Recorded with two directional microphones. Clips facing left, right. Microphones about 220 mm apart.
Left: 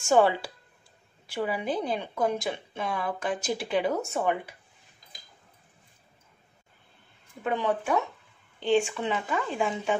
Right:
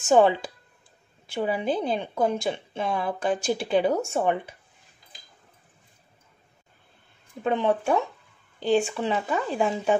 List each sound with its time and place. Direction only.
0.0 s speech: 20° right (ahead or behind)
7.4 s speech: 25° right (ahead or behind)